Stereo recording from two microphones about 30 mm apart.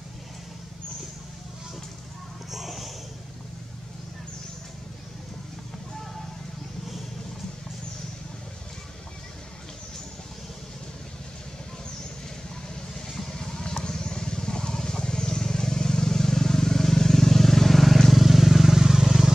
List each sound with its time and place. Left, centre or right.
2.5 s a sound: centre
12.9 s vehicle: centre
13.3 s vehicle: left; by 18.0 s centre
18.1 s vehicle: centre